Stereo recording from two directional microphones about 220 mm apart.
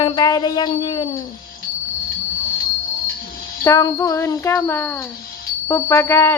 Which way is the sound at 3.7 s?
15° left (ahead or behind).